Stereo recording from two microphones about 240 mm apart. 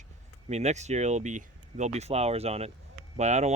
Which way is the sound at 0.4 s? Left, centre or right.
Right.